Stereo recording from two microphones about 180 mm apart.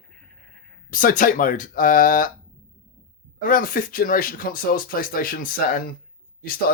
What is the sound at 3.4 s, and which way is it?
Speech, 50° left (ahead or behind).